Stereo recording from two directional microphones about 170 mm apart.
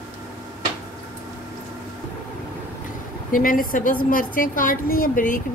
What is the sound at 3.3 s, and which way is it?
Speech, 55° left (ahead or behind).